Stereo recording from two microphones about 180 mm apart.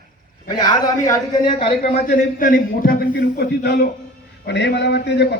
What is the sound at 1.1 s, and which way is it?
Speech, 25° left (ahead or behind).